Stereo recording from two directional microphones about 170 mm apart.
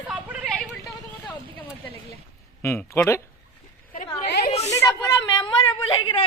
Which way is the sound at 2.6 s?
15° left (ahead or behind).